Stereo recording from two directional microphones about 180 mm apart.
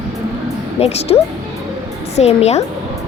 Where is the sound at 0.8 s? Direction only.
35° left (ahead or behind).